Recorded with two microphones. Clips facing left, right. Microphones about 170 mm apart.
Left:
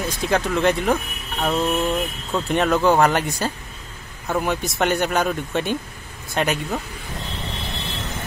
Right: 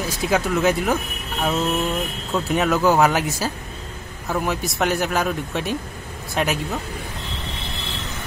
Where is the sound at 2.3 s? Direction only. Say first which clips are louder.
Left 1 dB; 5° right (ahead or behind).